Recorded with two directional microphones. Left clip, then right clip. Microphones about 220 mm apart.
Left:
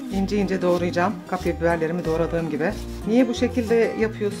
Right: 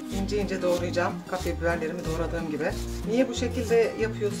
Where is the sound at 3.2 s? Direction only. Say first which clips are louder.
Left 5 dB; 40° left (ahead or behind).